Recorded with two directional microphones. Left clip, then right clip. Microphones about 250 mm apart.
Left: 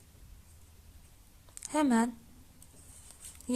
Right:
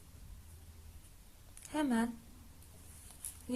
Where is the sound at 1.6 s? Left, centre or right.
Left.